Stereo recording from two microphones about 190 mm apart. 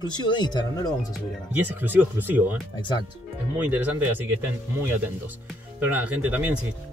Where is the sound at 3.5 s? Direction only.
10° right (ahead or behind).